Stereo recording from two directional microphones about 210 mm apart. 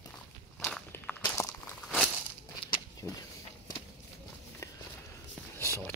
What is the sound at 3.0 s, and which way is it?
Speech, 15° left (ahead or behind).